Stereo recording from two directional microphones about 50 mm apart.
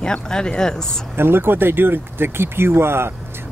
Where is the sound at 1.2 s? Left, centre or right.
Right.